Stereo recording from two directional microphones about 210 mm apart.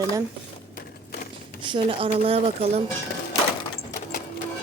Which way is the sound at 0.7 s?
40° left (ahead or behind).